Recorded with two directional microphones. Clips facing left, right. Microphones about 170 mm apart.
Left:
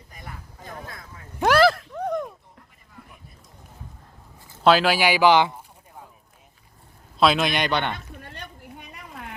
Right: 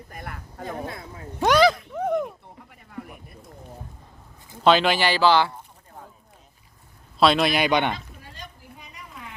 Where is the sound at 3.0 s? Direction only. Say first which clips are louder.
Right 11 dB; 75° right (ahead or behind).